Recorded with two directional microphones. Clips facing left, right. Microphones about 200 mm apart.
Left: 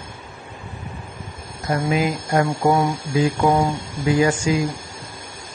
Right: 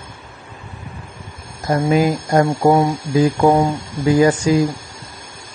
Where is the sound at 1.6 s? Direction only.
40° right (ahead or behind).